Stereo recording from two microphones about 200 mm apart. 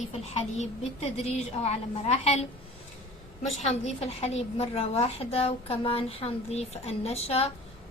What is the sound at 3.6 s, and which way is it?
A woman's voice, 30° left (ahead or behind).